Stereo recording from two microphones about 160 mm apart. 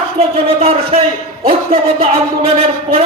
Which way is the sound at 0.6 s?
35° right (ahead or behind).